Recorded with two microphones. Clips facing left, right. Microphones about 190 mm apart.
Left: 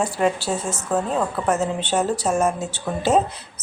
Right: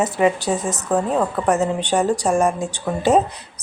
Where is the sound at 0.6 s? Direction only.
15° right (ahead or behind).